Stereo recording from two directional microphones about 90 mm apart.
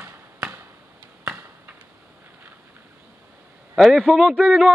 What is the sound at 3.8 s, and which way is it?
Speech, 5° left (ahead or behind).